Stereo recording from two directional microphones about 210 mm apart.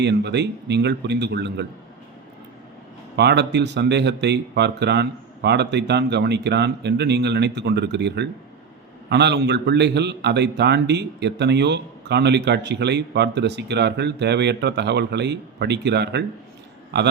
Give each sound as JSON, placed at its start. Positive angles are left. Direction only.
{"t": 0.0, "sound": "a man's voice", "side_deg": -55}
{"t": 3.2, "sound": "a man's voice", "side_deg": -55}